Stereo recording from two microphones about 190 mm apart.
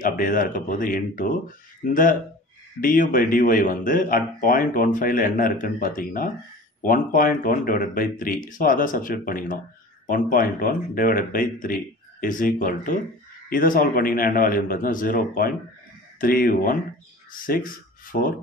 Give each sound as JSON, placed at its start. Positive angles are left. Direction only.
{"t": 0.0, "sound": "speech", "side_deg": 45}
{"t": 2.8, "sound": "speech", "side_deg": 45}